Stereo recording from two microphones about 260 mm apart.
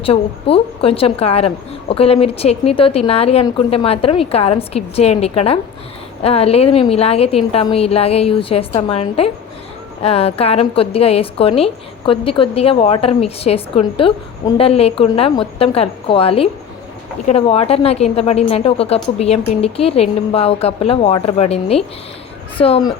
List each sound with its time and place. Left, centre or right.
0.0 s a woman's voice: left